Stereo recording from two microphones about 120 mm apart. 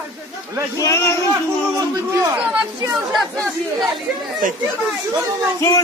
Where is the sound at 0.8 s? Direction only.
25° left (ahead or behind).